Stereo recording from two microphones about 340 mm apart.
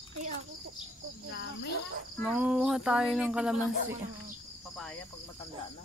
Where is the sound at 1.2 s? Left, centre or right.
Left.